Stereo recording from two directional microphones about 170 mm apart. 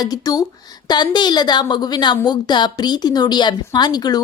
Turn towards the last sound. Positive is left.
turn(degrees=25)  # may be behind; listen again after turning